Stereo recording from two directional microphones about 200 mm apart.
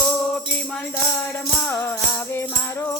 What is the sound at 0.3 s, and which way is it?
Music, 5° left (ahead or behind).